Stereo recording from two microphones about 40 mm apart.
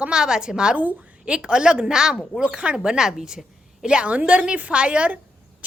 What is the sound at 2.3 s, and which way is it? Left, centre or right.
Speech, left.